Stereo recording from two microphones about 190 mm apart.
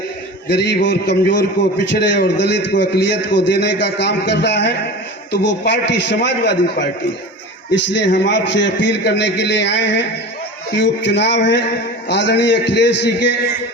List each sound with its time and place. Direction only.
0.4 s a man's voice: 65° left (ahead or behind)
8.0 s a man's voice: 70° left (ahead or behind)